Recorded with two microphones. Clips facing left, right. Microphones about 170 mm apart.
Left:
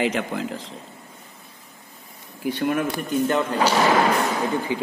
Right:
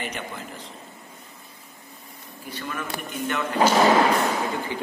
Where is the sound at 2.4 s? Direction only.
65° left (ahead or behind).